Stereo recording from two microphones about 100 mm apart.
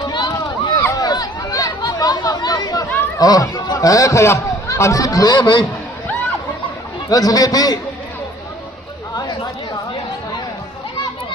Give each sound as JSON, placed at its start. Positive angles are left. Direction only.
{"t": 0.1, "sound": "run", "side_deg": 50}
{"t": 0.9, "sound": "chatter", "side_deg": 40}
{"t": 3.2, "sound": "a man's voice", "side_deg": 40}
{"t": 7.1, "sound": "a man's voice", "side_deg": 40}
{"t": 9.1, "sound": "chatter", "side_deg": 40}